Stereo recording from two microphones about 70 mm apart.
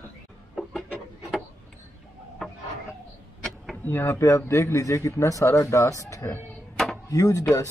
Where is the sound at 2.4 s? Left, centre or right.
Centre.